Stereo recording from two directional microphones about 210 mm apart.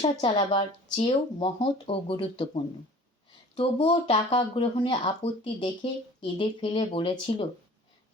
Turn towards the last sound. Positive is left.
turn(degrees=25)  # may be behind; listen again after turning